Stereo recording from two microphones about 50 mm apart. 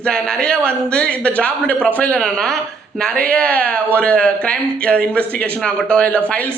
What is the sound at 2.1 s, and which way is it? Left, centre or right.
Speech, centre.